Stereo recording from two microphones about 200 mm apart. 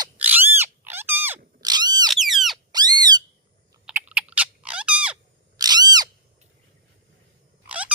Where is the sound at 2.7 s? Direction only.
20° right (ahead or behind).